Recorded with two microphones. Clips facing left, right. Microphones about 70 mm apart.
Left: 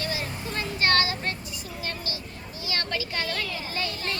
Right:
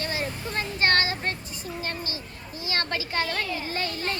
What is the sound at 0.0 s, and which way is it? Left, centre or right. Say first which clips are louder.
Vehicle: right 1 dB; right.